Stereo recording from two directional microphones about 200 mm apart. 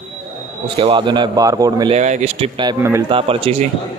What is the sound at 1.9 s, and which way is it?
A man's voice, 35° right (ahead or behind).